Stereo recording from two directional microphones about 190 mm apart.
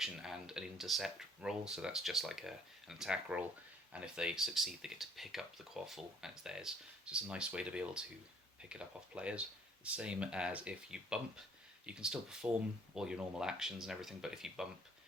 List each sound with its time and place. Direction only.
0.0 s speech: 5° right (ahead or behind)